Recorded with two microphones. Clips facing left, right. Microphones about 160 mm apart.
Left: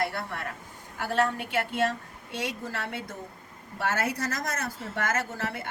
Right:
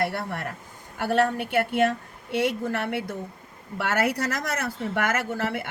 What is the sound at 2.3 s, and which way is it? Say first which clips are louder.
A woman's voice: right 9 dB; 60° right (ahead or behind).